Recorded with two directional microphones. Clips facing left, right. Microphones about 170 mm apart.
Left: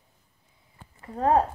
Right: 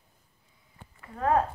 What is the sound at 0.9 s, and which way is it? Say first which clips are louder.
Speech: left 3 dB; 30° left (ahead or behind).